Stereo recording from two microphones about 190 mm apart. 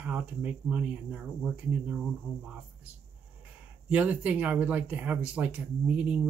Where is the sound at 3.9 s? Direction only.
5° right (ahead or behind).